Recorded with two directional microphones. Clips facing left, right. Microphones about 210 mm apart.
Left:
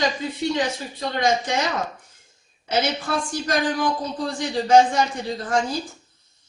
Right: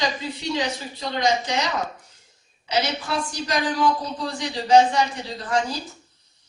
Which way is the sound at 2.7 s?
50° left (ahead or behind).